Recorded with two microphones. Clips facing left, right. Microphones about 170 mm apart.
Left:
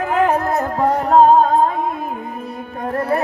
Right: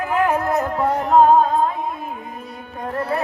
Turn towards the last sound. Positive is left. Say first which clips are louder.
# left 4 dB
turn(degrees=45)  # may be behind; listen again after turning